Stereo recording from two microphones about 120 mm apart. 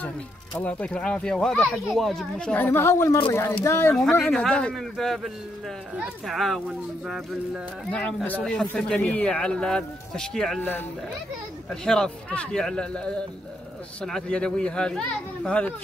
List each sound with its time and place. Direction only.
0.6 s speech: 10° left (ahead or behind)
4.2 s a man's voice: 5° left (ahead or behind)
7.9 s speech: 10° left (ahead or behind)
10.6 s speech: 15° left (ahead or behind)
11.7 s speech: 5° left (ahead or behind)